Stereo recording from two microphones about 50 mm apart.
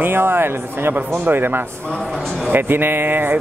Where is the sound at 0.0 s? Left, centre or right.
Right.